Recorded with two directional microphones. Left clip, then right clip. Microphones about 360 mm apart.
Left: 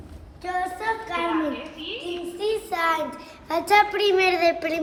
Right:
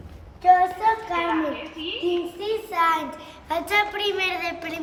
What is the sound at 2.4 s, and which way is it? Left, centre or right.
Speech, centre.